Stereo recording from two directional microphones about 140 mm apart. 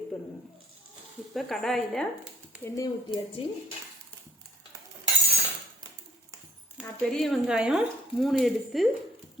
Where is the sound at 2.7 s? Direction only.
25° left (ahead or behind).